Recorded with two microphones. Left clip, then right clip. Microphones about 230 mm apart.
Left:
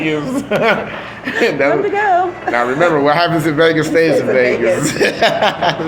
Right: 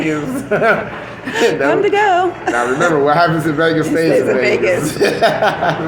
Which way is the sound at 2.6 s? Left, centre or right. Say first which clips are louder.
Left 1 dB; left.